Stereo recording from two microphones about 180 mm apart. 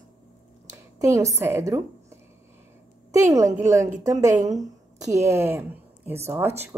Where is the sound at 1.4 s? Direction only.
15° right (ahead or behind).